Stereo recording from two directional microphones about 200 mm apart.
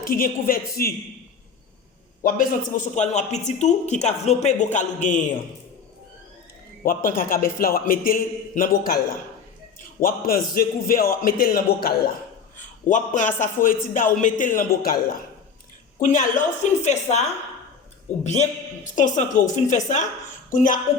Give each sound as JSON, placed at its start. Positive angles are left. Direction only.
{"t": 0.0, "sound": "a man's voice", "side_deg": 45}
{"t": 2.2, "sound": "speech", "side_deg": 45}
{"t": 6.8, "sound": "a man's voice", "side_deg": 45}
{"t": 10.0, "sound": "a man's voice", "side_deg": 45}
{"t": 12.5, "sound": "speech", "side_deg": 40}
{"t": 16.0, "sound": "speech", "side_deg": 40}